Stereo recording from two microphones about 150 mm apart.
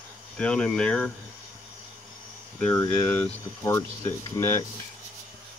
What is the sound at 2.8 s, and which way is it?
Speech, 10° left (ahead or behind).